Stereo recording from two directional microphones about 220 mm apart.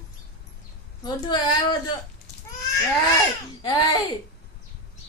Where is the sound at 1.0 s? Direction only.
20° left (ahead or behind).